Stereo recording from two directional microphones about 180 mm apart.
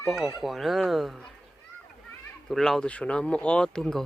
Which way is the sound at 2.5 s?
Centre (ahead or behind).